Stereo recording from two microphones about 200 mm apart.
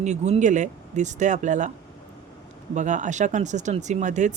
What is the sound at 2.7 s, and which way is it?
Speech, 35° right (ahead or behind).